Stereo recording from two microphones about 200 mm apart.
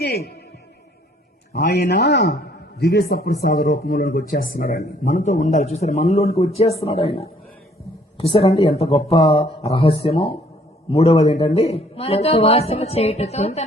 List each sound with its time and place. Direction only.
0.0 s a man's voice: 55° left (ahead or behind)
1.5 s a man's voice: 55° left (ahead or behind); by 13.7 s 30° left (ahead or behind)